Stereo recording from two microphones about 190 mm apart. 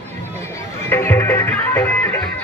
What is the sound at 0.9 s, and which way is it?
Music, 10° left (ahead or behind).